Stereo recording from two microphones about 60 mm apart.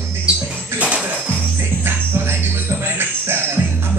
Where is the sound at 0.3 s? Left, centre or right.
Centre.